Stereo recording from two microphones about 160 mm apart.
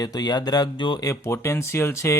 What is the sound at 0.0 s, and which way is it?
Speech, 25° left (ahead or behind).